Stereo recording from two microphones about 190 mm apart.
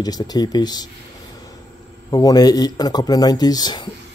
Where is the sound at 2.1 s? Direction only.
20° left (ahead or behind).